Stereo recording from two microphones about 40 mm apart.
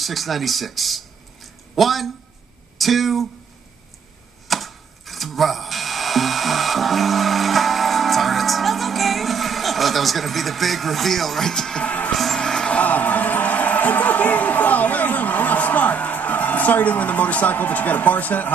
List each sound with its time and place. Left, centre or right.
0.0 s speech: centre
4.5 s music: centre
11.8 s music: left
12.4 s music: centre
12.8 s music: left